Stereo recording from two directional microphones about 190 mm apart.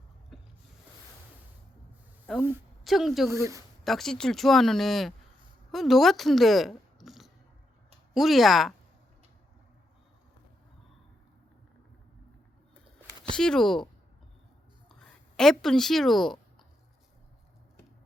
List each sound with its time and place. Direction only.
0.3 s a sound: centre (ahead or behind)
2.3 s a woman's voice: centre (ahead or behind)
3.2 s speech: 15° right (ahead or behind)
3.8 s a woman's voice: centre (ahead or behind)
13.3 s speech: 5° left (ahead or behind)
14.8 s a sound: centre (ahead or behind)